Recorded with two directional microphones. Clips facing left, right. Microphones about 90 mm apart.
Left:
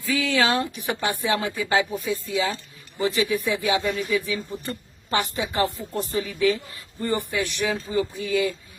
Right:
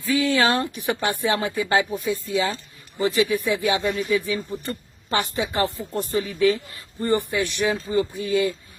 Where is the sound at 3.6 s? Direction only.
30° right (ahead or behind).